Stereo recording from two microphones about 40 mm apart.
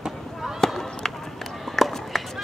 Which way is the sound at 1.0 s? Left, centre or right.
Centre.